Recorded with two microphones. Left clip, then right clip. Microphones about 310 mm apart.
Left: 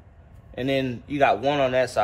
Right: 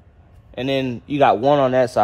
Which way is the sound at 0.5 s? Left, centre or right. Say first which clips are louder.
Right 3 dB; centre.